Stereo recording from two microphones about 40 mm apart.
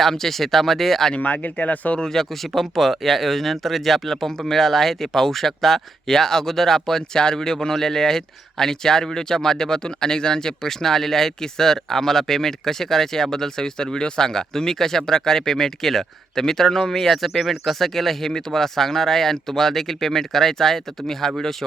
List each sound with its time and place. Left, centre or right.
0.0 s speech: centre
1.1 s speech: left
2.0 s speech: centre